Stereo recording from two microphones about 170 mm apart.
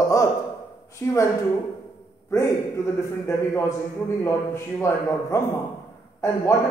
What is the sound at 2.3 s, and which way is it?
A man's voice, 15° left (ahead or behind).